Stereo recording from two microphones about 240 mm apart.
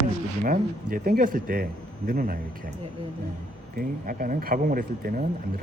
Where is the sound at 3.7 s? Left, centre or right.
Right.